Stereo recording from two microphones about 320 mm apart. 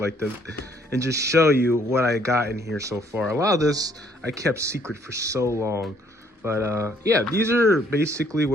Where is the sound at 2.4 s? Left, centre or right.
Right.